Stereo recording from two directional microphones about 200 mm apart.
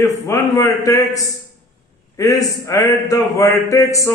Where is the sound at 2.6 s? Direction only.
15° left (ahead or behind).